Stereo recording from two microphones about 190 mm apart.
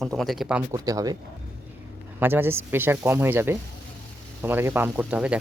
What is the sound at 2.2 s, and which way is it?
Speech, 10° right (ahead or behind).